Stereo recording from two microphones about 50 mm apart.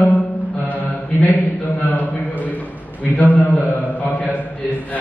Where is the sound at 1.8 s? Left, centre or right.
Left.